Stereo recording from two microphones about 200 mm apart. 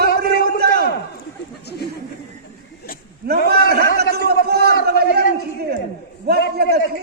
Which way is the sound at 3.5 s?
55° right (ahead or behind).